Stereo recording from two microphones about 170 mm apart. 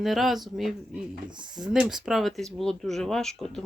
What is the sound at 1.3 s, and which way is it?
Speech, 25° right (ahead or behind).